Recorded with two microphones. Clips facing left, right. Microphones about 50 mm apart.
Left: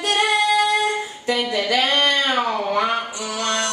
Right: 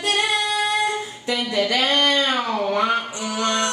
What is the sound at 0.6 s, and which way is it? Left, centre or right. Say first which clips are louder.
Humming: left 3 dB; left.